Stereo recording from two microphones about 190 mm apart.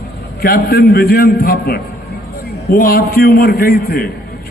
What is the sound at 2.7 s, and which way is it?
A man's voice, 55° left (ahead or behind).